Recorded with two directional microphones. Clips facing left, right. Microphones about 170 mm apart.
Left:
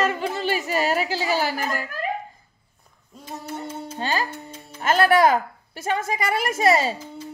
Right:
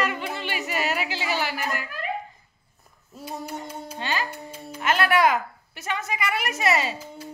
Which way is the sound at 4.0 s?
40° left (ahead or behind).